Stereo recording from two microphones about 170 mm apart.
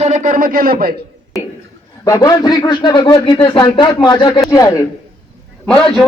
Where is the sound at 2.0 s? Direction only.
20° left (ahead or behind).